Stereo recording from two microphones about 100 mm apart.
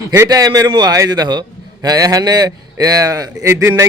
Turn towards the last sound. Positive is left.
turn(degrees=-30)  # may be behind; listen again after turning